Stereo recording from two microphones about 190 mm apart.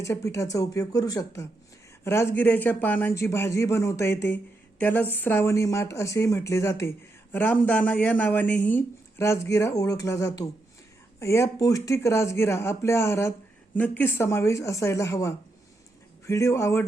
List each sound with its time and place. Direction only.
0.0 s speech: 15° left (ahead or behind)